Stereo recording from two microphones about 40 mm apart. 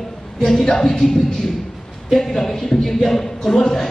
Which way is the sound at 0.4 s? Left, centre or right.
Centre.